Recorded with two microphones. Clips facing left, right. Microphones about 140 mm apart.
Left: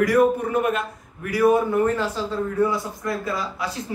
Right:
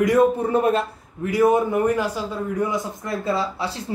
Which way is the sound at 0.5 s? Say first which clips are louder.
Right 3 dB; 30° right (ahead or behind).